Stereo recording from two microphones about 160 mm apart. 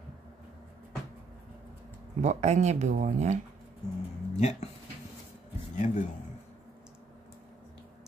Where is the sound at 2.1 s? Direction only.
50° right (ahead or behind).